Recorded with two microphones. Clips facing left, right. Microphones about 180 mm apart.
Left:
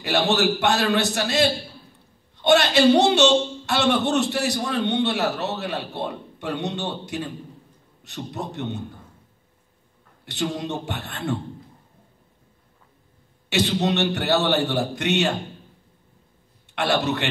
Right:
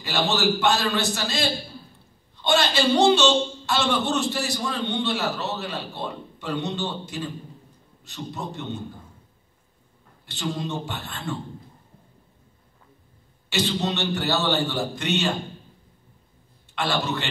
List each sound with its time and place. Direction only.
0.0 s a man's voice: 65° left (ahead or behind)
10.2 s a man's voice: 65° left (ahead or behind)
13.5 s a man's voice: 65° left (ahead or behind)
16.7 s a man's voice: 65° left (ahead or behind)